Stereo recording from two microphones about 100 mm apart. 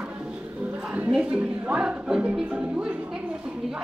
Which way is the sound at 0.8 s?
15° right (ahead or behind).